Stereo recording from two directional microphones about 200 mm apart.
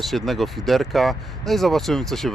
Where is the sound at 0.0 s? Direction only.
Centre (ahead or behind).